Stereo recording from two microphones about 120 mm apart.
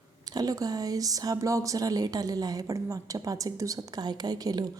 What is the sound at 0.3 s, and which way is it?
A woman's voice, 30° right (ahead or behind).